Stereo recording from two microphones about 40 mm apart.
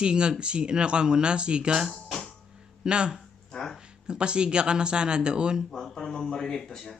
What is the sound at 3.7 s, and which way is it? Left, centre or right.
Speech, right.